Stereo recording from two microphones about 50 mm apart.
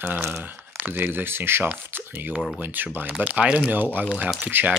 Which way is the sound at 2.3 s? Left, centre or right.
Centre.